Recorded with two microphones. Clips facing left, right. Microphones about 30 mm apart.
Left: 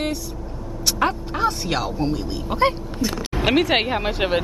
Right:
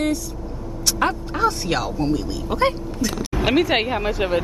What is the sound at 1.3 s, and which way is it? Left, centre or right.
Speech, centre.